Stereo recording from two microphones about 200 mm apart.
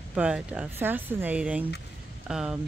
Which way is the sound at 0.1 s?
5° right (ahead or behind).